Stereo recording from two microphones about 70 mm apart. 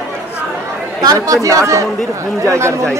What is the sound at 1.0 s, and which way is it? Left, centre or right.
Speech, right.